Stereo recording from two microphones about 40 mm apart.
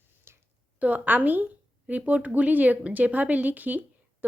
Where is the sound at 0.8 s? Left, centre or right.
Right.